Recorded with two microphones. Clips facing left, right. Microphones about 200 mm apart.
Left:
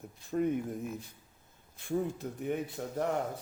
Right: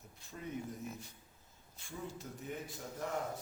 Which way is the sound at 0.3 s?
55° left (ahead or behind).